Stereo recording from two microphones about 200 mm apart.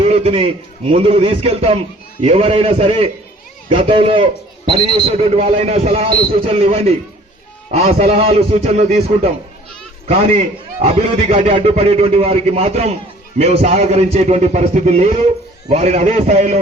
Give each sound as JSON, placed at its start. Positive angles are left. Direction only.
{"t": 0.0, "sound": "a man's voice", "side_deg": -30}